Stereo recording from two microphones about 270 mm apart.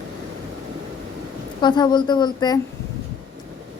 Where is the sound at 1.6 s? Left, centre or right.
Centre.